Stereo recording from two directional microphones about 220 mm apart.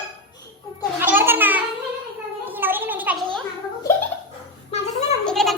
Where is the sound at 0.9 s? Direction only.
10° right (ahead or behind).